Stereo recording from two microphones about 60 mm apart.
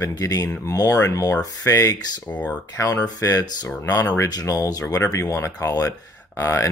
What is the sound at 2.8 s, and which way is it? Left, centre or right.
Speech, left.